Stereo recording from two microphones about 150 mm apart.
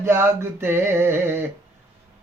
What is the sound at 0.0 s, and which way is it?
Speech, 15° right (ahead or behind).